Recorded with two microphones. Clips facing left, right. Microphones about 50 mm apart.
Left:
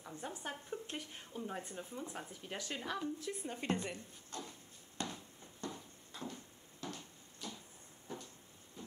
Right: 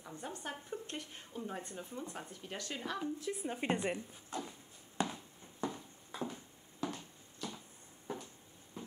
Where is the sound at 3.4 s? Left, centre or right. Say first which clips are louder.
Right 4 dB; centre.